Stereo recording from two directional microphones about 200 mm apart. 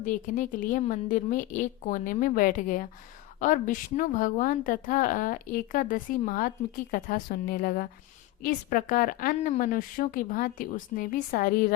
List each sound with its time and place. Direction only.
0.0 s a woman's voice: 40° left (ahead or behind)